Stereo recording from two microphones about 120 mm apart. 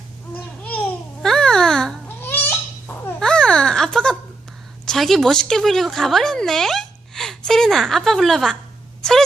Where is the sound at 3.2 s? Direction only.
5° left (ahead or behind).